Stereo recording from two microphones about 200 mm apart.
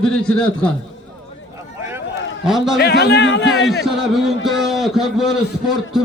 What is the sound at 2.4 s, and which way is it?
Speech, centre (ahead or behind).